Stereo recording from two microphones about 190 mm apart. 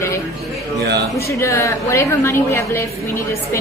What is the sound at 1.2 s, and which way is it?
A woman's voice, 15° left (ahead or behind).